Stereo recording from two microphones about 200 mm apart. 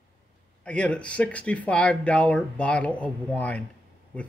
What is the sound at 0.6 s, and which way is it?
Speech, 5° left (ahead or behind).